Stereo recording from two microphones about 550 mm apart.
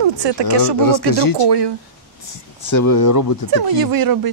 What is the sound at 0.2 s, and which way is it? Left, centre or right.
Speech, right.